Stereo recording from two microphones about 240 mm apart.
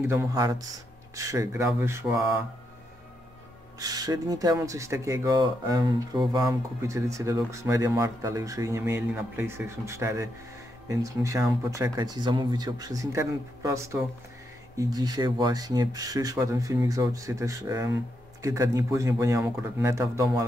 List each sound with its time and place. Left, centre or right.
0.0 s speech: centre
3.8 s speech: centre